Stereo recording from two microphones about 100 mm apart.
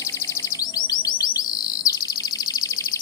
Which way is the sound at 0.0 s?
30° left (ahead or behind).